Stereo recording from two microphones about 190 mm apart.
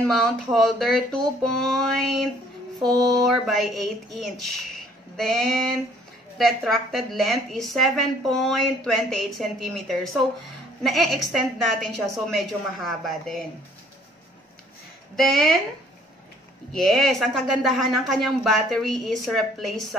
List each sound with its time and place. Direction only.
0.0 s a woman's voice: 5° left (ahead or behind)
15.1 s a woman's voice: centre (ahead or behind)
16.7 s a woman's voice: centre (ahead or behind)